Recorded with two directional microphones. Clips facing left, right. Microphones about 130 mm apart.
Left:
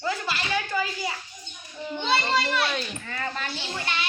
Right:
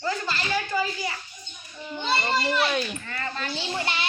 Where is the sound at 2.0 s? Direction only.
5° right (ahead or behind).